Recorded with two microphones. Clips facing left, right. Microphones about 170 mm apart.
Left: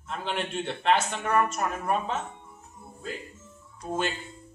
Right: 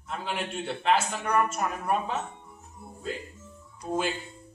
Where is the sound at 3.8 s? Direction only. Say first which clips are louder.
Right 1 dB; 5° right (ahead or behind).